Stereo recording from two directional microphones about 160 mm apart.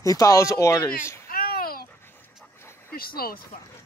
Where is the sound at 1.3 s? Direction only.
65° left (ahead or behind).